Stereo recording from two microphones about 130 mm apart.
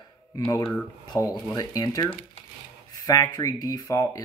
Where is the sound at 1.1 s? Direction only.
20° left (ahead or behind).